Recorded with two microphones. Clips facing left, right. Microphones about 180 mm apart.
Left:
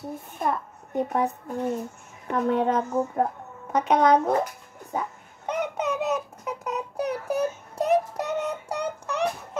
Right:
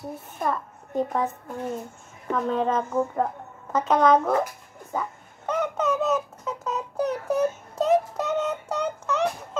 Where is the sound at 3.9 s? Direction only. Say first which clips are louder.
Even; 15° left (ahead or behind).